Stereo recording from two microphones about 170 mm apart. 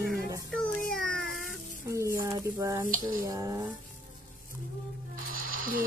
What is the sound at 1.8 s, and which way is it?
A woman's voice, 15° right (ahead or behind).